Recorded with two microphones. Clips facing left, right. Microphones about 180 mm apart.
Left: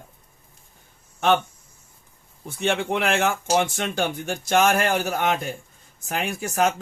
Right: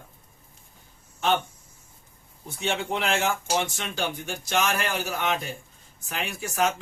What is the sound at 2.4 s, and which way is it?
Speech, 55° left (ahead or behind).